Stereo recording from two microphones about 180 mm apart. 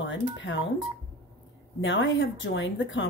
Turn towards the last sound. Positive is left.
turn(degrees=90)